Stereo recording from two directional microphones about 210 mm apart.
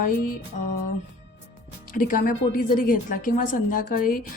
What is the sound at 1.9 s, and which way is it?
A woman's voice, 40° left (ahead or behind).